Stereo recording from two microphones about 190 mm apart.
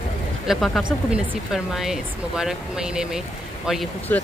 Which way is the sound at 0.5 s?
Centre (ahead or behind).